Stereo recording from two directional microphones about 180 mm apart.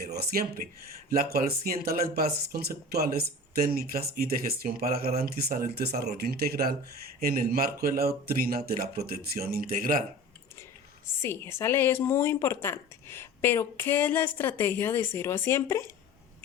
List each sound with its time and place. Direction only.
0.0 s speech: 60° right (ahead or behind)
11.2 s a woman's voice: 15° left (ahead or behind)